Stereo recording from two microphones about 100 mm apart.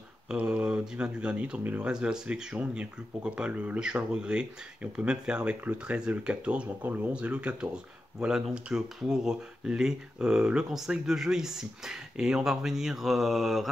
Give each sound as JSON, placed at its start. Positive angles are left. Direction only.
{"t": 0.3, "sound": "speech", "side_deg": -10}